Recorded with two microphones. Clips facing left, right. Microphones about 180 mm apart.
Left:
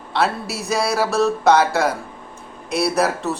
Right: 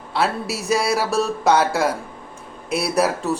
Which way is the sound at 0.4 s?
55° left (ahead or behind).